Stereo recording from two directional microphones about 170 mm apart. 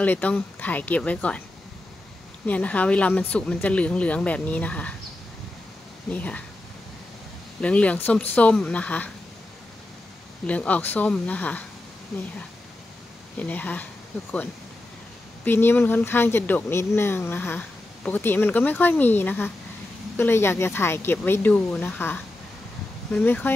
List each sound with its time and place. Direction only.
0.0 s speech: 10° left (ahead or behind)
2.4 s speech: 10° left (ahead or behind)
6.0 s speech: 10° left (ahead or behind)
7.6 s speech: 5° left (ahead or behind)
10.4 s speech: 10° left (ahead or behind)
13.4 s speech: 10° left (ahead or behind)
15.4 s speech: 10° left (ahead or behind)